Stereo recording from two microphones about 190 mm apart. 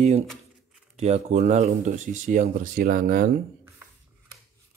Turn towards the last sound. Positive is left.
turn(degrees=-45)  # may be behind; listen again after turning